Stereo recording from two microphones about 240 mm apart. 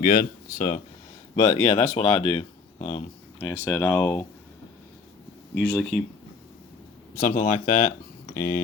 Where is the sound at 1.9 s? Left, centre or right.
Left.